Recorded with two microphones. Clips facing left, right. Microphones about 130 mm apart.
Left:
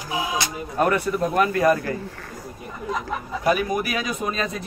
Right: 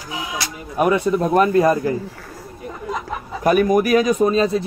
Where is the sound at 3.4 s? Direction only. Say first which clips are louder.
Right 7 dB; 50° right (ahead or behind); by 4.6 s 30° right (ahead or behind).